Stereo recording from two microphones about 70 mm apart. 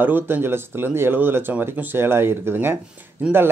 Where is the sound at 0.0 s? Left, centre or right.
Right.